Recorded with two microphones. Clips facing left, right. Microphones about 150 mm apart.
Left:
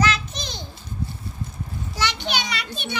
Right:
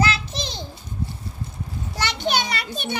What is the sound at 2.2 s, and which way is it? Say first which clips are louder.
Children playing: right 4 dB; 45° right (ahead or behind).